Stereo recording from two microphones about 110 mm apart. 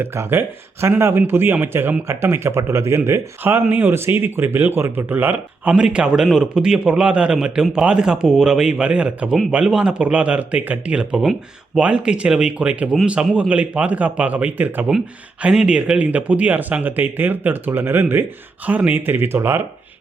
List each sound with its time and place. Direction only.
0.0 s speech: 20° right (ahead or behind)